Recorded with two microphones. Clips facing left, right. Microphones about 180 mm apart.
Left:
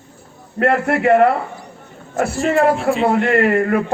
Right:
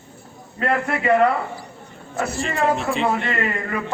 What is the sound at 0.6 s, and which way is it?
Speech, 55° left (ahead or behind).